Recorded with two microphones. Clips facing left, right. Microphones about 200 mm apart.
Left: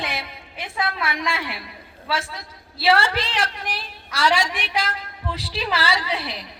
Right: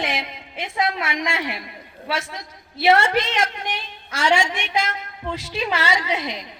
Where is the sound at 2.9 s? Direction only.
30° left (ahead or behind).